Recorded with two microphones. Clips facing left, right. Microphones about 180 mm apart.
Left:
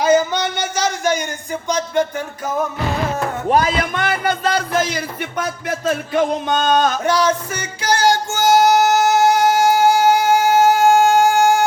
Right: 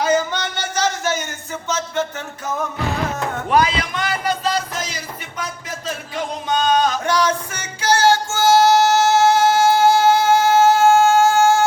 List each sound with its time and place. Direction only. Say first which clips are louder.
0.0 s a sound: left 4 dB; 10° left (ahead or behind)
1.6 s music: left 4 dB; 15° left (ahead or behind)
3.5 s music: left 1 dB; 50° left (ahead or behind)
7.0 s music: left 2 dB; 10° left (ahead or behind)